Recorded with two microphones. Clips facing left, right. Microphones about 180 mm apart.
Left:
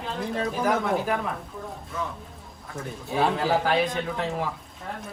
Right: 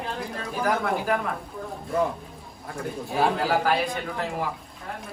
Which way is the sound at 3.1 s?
5° right (ahead or behind).